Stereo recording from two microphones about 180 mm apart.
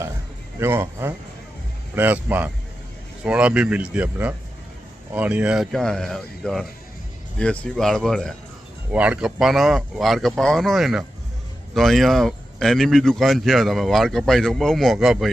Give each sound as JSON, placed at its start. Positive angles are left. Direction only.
{"t": 0.6, "sound": "speech", "side_deg": -15}